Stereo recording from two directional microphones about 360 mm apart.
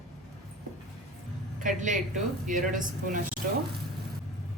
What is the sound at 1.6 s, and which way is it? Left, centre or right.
Speech, right.